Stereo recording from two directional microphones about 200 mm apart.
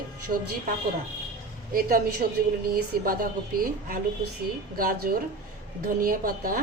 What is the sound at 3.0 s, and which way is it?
A woman's voice, 45° right (ahead or behind).